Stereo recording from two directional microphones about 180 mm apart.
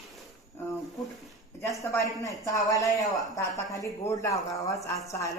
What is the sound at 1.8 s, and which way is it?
A woman's voice, 15° left (ahead or behind).